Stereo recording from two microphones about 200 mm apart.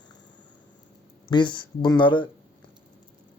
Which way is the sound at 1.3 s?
25° left (ahead or behind).